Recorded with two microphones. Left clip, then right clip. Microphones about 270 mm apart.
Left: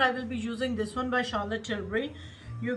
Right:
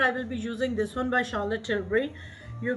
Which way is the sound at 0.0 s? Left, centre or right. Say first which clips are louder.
Right 1 dB; centre.